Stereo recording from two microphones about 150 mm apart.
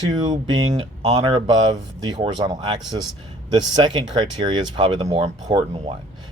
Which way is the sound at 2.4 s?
30° right (ahead or behind).